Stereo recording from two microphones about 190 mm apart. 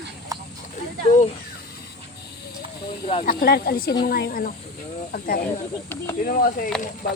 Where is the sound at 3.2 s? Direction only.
50° left (ahead or behind).